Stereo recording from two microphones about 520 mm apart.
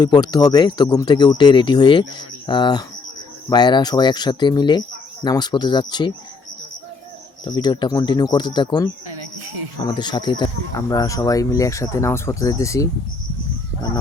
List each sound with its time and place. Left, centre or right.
0.0 s speech: centre
7.4 s speech: centre
9.0 s a sound: right
9.8 s speech: centre